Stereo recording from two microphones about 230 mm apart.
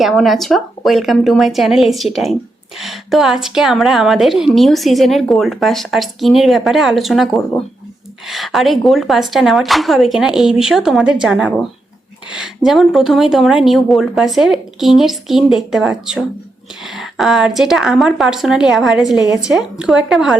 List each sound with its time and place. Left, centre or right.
0.0 s a woman's voice: centre